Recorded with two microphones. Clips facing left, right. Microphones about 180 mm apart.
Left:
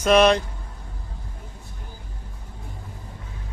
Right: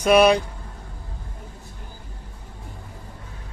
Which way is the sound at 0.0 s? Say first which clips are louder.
Right 1 dB; 10° right (ahead or behind).